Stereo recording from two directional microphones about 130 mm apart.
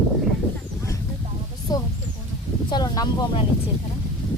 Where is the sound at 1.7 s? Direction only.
30° left (ahead or behind).